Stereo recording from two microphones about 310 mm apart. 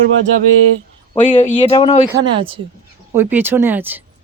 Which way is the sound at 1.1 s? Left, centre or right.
Centre.